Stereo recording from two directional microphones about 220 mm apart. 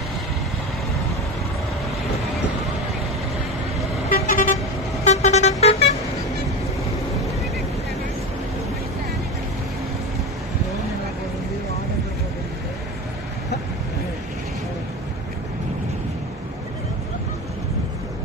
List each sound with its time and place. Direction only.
4.1 s vehicle: 40° left (ahead or behind)